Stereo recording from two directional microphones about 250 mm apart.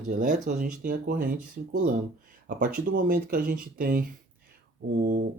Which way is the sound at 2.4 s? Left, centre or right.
Right.